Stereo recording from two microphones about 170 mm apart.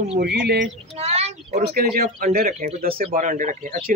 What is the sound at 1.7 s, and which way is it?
Speech, 65° right (ahead or behind).